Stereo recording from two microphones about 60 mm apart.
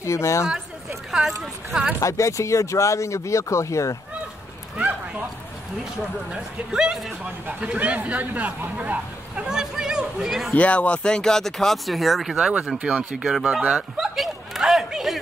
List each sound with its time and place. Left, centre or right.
0.0 s speech: left
1.4 s speech: centre
2.0 s speech: left
4.7 s a sound: right
6.3 s speech: centre
9.4 s chatter: centre
10.5 s speech: left; by 12.4 s centre
12.4 s speech: centre
13.7 s a sound: centre